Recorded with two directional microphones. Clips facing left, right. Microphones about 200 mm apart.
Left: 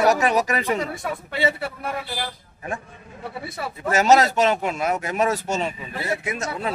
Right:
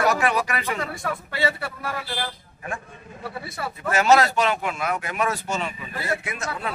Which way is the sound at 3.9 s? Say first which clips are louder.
Left 1 dB; 40° left (ahead or behind).